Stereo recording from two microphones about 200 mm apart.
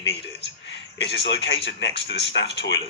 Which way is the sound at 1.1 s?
60° left (ahead or behind).